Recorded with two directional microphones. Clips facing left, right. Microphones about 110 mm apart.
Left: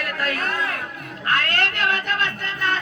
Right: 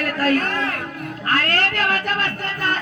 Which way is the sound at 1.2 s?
35° right (ahead or behind).